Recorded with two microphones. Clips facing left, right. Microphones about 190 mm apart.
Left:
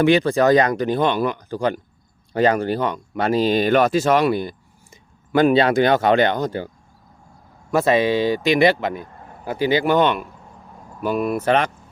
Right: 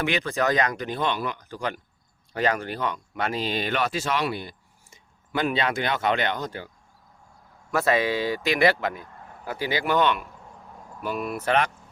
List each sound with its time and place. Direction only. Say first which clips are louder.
0.0 s speech: left 10 dB; 35° left (ahead or behind)
7.7 s a man's voice: left 6 dB; 20° left (ahead or behind); by 11.4 s 45° left (ahead or behind)
11.4 s speech: left 3 dB; 25° left (ahead or behind)